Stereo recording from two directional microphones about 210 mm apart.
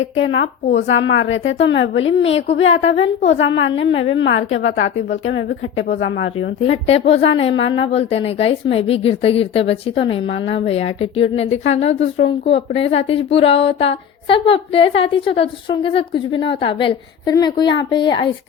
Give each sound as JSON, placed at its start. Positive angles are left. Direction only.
{"t": 0.3, "sound": "a woman's voice", "side_deg": 60}
{"t": 6.6, "sound": "a woman's voice", "side_deg": 30}